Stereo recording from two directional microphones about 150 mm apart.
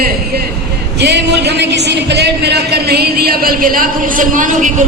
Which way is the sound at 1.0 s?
90° right.